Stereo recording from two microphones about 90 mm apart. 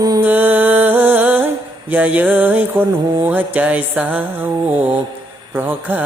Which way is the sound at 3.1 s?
20° right (ahead or behind).